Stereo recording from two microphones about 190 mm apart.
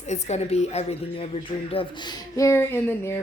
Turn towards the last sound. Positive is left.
turn(degrees=10)  # may be behind; listen again after turning